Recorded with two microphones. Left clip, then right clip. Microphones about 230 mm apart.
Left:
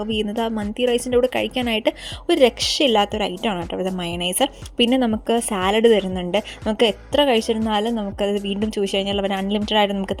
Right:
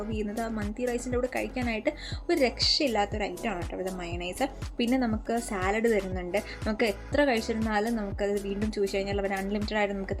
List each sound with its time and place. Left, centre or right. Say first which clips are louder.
0.1 s a woman's voice: left 12 dB; left